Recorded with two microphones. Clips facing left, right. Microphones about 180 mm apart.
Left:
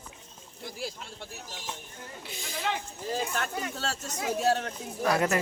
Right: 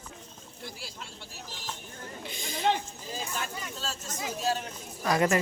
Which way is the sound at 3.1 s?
60° left (ahead or behind).